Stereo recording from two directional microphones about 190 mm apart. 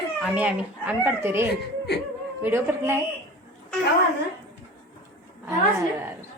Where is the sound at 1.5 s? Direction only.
60° left (ahead or behind).